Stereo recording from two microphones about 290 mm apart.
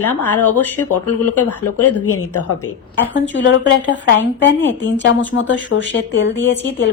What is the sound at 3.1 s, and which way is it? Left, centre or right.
A woman's voice, left.